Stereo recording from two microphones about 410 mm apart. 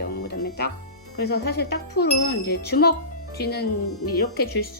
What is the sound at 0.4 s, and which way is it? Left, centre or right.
Music, left.